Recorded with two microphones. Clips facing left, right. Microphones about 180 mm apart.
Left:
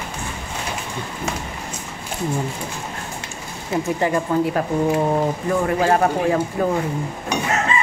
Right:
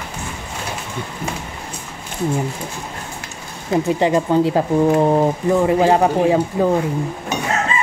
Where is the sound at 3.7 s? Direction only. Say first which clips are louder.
Right 4 dB; 20° right (ahead or behind).